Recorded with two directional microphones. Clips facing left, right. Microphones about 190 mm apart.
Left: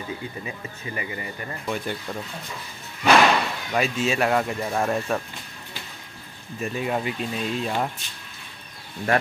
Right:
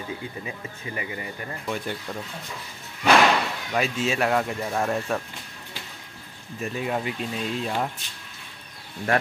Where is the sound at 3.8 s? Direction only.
15° left (ahead or behind).